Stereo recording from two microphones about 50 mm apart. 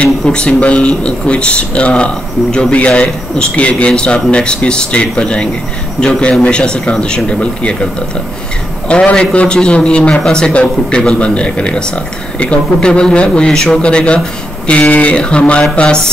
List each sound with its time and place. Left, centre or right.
0.0 s a man's voice: centre